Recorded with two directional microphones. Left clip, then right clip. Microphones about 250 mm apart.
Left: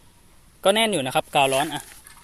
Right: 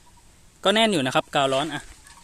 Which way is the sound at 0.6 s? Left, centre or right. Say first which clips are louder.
Even; centre.